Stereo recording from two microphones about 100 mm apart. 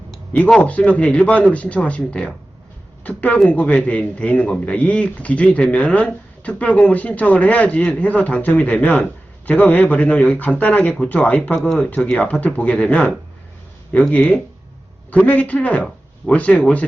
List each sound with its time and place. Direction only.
0.3 s speech: 10° left (ahead or behind)